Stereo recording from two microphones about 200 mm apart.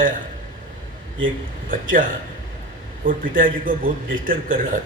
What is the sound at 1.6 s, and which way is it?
Speech, 40° right (ahead or behind).